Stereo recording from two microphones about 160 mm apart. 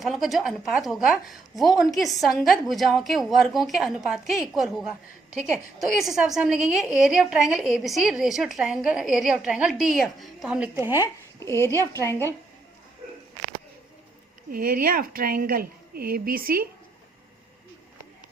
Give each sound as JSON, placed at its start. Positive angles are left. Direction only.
{"t": 0.0, "sound": "a woman's voice", "side_deg": 0}
{"t": 10.8, "sound": "speech", "side_deg": -15}
{"t": 11.3, "sound": "a woman's voice", "side_deg": 15}
{"t": 14.5, "sound": "a woman's voice", "side_deg": -65}